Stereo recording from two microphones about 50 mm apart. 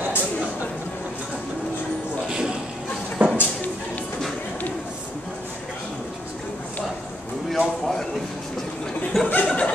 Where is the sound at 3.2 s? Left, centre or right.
Right.